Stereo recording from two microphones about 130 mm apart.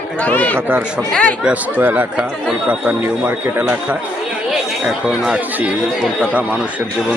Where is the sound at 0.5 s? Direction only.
15° right (ahead or behind).